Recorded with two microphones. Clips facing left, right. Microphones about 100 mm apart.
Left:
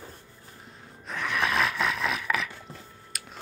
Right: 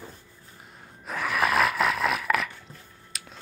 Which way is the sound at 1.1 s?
5° right (ahead or behind).